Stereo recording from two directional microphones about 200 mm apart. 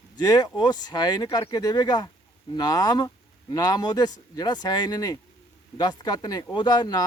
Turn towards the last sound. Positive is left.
turn(degrees=20)  # may be behind; listen again after turning